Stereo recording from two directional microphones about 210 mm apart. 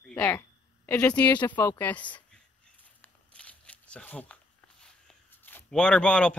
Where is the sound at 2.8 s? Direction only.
5° left (ahead or behind).